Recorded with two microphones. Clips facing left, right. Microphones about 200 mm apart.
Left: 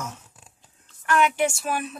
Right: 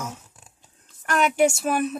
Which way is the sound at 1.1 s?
40° right (ahead or behind).